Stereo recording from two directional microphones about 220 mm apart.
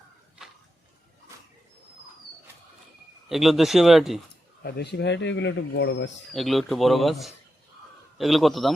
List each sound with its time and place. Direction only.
3.2 s speech: centre (ahead or behind)
4.6 s speech: 50° left (ahead or behind)
6.3 s speech: centre (ahead or behind)